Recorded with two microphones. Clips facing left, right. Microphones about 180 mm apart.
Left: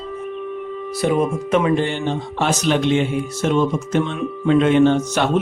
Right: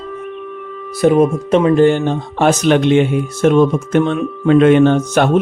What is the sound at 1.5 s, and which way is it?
Speech, 35° right (ahead or behind).